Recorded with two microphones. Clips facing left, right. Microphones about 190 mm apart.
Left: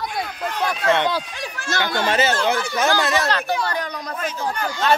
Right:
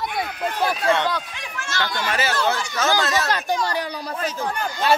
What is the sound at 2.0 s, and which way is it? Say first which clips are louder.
Speech: left 3 dB; 20° left (ahead or behind).